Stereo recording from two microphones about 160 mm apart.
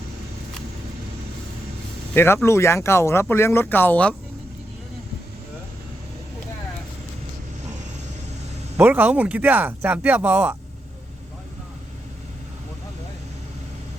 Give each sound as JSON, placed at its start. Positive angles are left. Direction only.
{"t": 2.1, "sound": "speech", "side_deg": 15}
{"t": 8.8, "sound": "speech", "side_deg": -10}